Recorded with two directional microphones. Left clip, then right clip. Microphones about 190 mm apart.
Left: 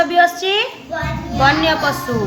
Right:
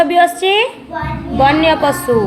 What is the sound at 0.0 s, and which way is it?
A woman's voice, 25° right (ahead or behind).